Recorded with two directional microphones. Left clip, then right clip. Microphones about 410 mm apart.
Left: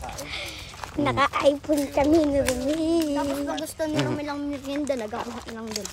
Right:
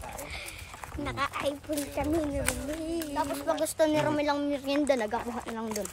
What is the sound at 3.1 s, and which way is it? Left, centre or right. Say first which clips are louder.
Speech: left 3 dB; centre.